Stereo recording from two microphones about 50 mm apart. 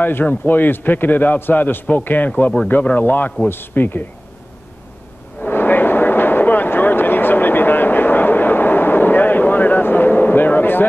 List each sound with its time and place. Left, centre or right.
0.0 s a man's voice: left
5.5 s vehicle: left